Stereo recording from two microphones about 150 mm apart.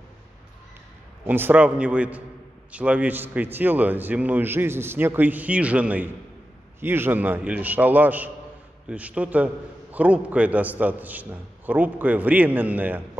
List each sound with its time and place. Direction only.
1.2 s a man's voice: 15° right (ahead or behind)